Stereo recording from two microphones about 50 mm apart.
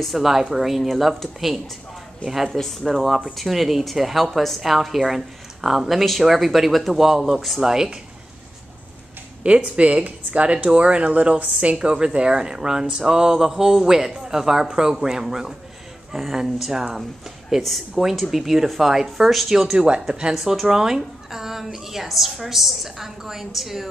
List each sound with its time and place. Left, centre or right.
0.0 s a woman's voice: centre
9.4 s a woman's voice: right; by 19.6 s centre
19.6 s speech: centre
20.3 s a woman's voice: centre